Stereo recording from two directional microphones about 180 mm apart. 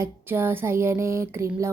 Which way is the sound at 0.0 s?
10° right (ahead or behind).